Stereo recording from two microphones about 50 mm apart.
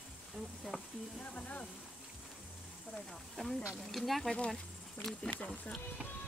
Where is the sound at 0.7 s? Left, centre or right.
Centre.